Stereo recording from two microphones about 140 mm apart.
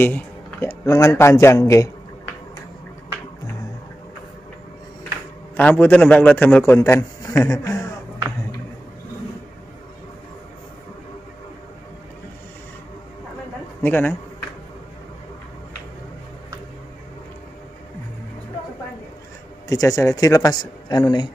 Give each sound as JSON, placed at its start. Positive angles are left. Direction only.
{"t": 0.0, "sound": "speech", "side_deg": 15}
{"t": 5.6, "sound": "a man's voice", "side_deg": 10}
{"t": 13.8, "sound": "a man's voice", "side_deg": 15}
{"t": 19.7, "sound": "speech", "side_deg": 25}